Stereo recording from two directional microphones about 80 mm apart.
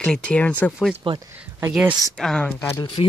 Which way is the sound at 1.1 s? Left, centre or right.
Right.